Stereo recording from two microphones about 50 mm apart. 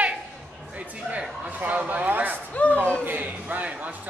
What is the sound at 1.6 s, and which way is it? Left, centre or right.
Speech, right.